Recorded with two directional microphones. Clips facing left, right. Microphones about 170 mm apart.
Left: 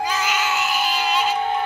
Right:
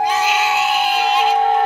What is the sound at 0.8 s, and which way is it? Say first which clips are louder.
Synthetic singing: right 5 dB; 60° right (ahead or behind).